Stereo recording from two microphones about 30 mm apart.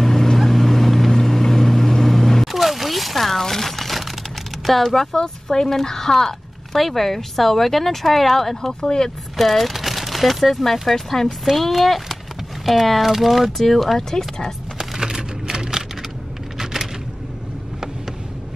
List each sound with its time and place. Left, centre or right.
0.0 s boat: centre
1.2 s vehicle: centre
2.4 s a sound: centre
4.6 s speech: centre
5.1 s speech: centre
8.8 s speech: left
9.4 s speech: centre
13.9 s speech: centre
15.0 s typing: right